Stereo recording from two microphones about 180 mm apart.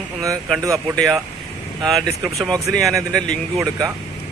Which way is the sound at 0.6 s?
15° right (ahead or behind).